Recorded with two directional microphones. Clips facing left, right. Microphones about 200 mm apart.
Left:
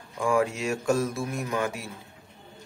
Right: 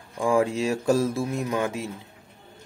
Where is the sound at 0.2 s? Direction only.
30° right (ahead or behind).